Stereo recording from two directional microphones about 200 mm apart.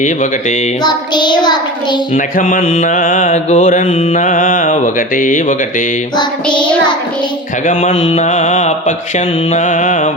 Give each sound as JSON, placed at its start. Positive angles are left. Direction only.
{"t": 0.9, "sound": "child singing", "side_deg": 20}
{"t": 2.1, "sound": "mantra", "side_deg": 40}
{"t": 7.7, "sound": "mantra", "side_deg": 35}